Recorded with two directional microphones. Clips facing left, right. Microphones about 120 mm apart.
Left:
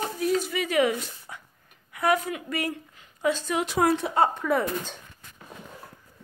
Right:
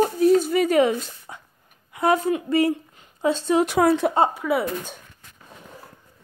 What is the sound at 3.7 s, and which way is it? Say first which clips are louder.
Speech: right 5 dB; 60° right (ahead or behind).